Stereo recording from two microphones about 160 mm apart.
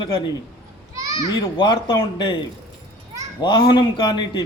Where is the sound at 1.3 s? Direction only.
30° left (ahead or behind).